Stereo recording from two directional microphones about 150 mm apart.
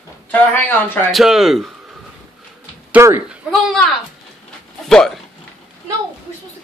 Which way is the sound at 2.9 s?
15° right (ahead or behind).